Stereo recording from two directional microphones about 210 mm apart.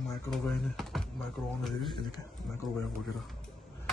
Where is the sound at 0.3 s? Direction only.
Centre (ahead or behind).